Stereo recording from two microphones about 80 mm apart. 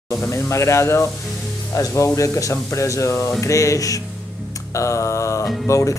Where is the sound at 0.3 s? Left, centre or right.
Left.